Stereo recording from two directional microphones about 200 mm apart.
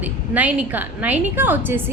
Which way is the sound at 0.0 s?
10° right (ahead or behind).